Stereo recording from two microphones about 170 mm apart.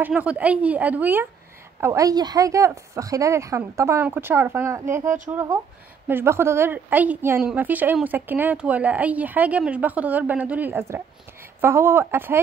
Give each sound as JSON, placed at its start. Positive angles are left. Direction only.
{"t": 0.0, "sound": "a woman's voice", "side_deg": -10}